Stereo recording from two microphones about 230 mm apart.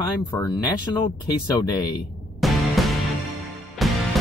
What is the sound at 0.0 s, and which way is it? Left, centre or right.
Speech, centre.